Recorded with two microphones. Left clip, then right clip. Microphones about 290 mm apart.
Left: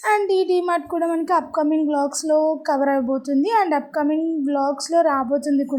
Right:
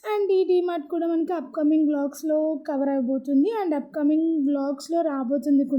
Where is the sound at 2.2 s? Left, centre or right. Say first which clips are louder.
Left 5 dB; left.